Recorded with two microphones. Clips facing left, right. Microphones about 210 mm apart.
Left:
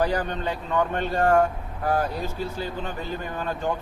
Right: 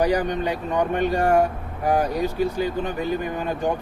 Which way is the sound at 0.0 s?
15° right (ahead or behind).